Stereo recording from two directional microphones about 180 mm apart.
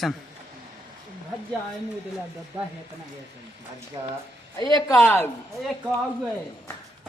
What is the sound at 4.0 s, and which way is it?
Speech, 20° right (ahead or behind).